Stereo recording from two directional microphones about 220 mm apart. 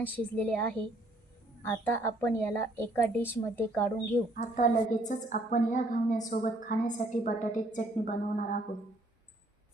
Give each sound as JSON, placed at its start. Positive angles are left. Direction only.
{"t": 0.0, "sound": "a woman's voice", "side_deg": 5}
{"t": 4.4, "sound": "a woman's voice", "side_deg": 35}